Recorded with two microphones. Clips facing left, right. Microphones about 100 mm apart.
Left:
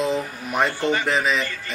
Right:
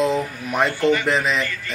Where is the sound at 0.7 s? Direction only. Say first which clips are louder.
Right 4 dB; 30° left (ahead or behind).